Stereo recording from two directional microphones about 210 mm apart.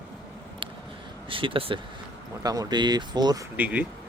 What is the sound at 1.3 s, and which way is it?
Speech, 25° right (ahead or behind).